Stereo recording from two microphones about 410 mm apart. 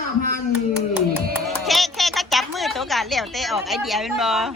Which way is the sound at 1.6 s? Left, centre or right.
Centre.